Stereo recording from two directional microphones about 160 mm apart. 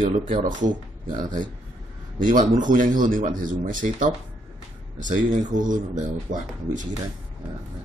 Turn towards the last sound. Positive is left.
turn(degrees=-55)  # may be behind; listen again after turning